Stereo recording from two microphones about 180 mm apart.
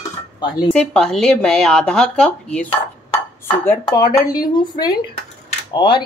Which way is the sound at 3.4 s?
15° left (ahead or behind).